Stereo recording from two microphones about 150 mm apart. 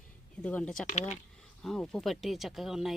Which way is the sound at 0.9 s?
50° left (ahead or behind).